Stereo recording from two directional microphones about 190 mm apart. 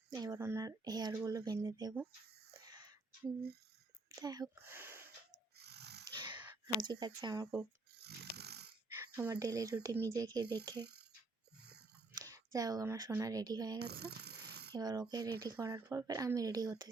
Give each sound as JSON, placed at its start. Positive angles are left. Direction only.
{"t": 0.1, "sound": "speech", "side_deg": -20}
{"t": 2.5, "sound": "whispering", "side_deg": -20}
{"t": 4.1, "sound": "speech", "side_deg": -20}
{"t": 5.3, "sound": "dog", "side_deg": -60}
{"t": 6.1, "sound": "a sound", "side_deg": -25}
{"t": 7.9, "sound": "snoring", "side_deg": -60}
{"t": 9.0, "sound": "speech", "side_deg": -15}
{"t": 11.6, "sound": "a sound", "side_deg": -60}
{"t": 12.1, "sound": "speech", "side_deg": -15}
{"t": 13.7, "sound": "a sound", "side_deg": -60}
{"t": 14.8, "sound": "speech", "side_deg": -20}